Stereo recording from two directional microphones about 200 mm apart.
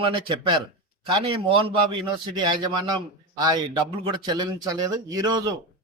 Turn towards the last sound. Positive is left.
turn(degrees=-20)  # may be behind; listen again after turning